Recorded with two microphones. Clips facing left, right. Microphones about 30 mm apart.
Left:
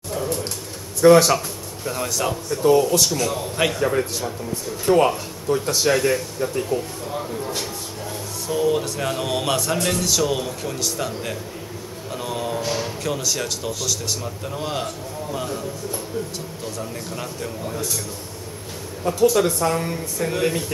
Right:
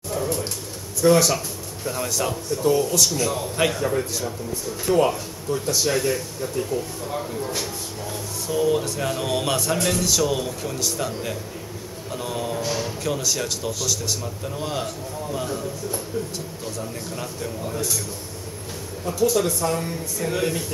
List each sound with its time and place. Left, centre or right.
0.1 s a sound: centre
1.0 s speech: centre
1.9 s speech: centre
2.5 s speech: left
3.1 s speech: centre
3.8 s speech: left
5.9 s speech: centre
19.1 s speech: left
19.4 s speech: centre